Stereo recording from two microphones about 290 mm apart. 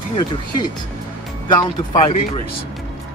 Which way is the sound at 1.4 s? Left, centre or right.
Centre.